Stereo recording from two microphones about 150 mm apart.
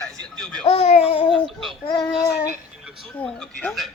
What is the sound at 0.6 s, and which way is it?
Speech, 45° left (ahead or behind).